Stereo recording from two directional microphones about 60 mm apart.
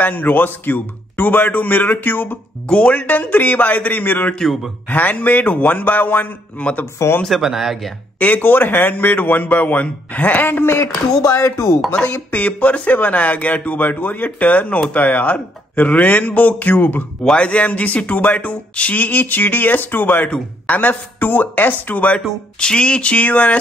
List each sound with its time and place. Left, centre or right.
0.0 s a man's voice: left
2.7 s speech: left
7.2 s speech: centre
8.2 s a man's voice: left
11.2 s speech: left
11.9 s speech: left
17.2 s speech: centre
22.6 s speech: centre